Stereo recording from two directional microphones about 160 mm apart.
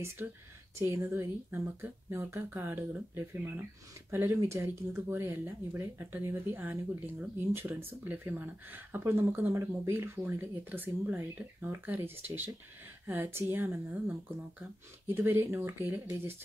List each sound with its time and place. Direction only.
0.7 s speech: 15° right (ahead or behind)